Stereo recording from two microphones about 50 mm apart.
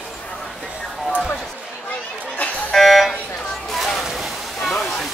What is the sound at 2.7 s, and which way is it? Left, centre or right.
Buzzer, centre.